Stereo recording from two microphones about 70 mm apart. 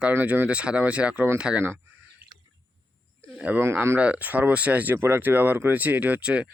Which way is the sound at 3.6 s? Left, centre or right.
Right.